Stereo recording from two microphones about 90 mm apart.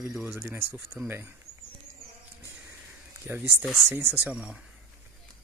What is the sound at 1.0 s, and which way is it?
Speech, 5° right (ahead or behind).